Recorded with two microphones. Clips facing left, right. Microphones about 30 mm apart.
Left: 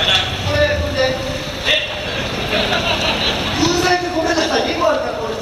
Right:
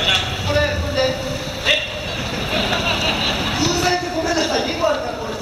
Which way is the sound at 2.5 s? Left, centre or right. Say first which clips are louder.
Left 2 dB; centre.